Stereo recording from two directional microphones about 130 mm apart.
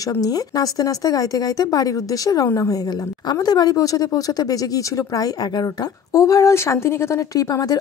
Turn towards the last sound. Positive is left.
turn(degrees=30)  # may be behind; listen again after turning